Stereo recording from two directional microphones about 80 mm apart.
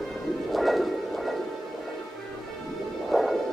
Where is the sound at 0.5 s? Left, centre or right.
Centre.